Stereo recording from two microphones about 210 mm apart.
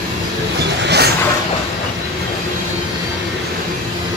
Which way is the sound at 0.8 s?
50° right (ahead or behind).